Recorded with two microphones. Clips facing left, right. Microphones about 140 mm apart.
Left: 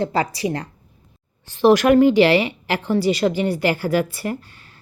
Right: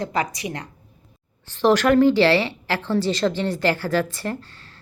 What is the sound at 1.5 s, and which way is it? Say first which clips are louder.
Speech: left 3 dB; 15° left (ahead or behind).